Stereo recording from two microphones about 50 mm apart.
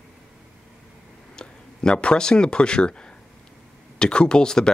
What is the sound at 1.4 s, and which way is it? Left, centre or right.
Speech, centre.